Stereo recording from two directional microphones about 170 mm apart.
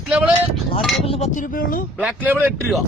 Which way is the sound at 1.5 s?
55° left (ahead or behind).